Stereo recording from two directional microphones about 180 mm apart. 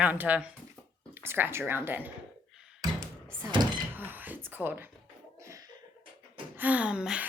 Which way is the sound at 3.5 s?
25° right (ahead or behind).